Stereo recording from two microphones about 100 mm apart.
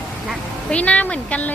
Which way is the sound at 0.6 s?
10° left (ahead or behind).